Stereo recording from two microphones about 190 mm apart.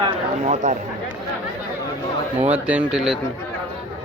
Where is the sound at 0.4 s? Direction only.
40° right (ahead or behind).